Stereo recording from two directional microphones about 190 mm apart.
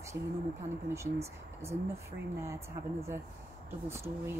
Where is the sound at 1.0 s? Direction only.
15° right (ahead or behind).